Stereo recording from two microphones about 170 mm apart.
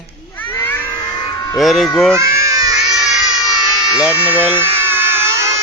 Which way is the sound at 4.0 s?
10° right (ahead or behind).